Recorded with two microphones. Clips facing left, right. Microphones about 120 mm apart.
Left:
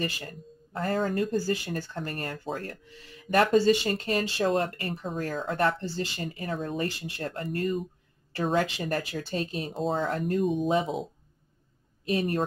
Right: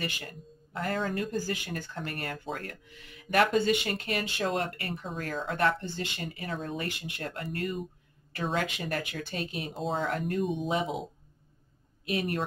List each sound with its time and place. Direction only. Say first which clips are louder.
0.0 s speech: left 4 dB; 35° left (ahead or behind)
9.7 s speech: left 4 dB; centre (ahead or behind)
10.0 s speech: left 3 dB; 30° left (ahead or behind)
10.4 s speech: left 4 dB; centre (ahead or behind)
10.7 s speech: left 4 dB; 30° left (ahead or behind)
12.1 s speech: left 4 dB; 35° left (ahead or behind)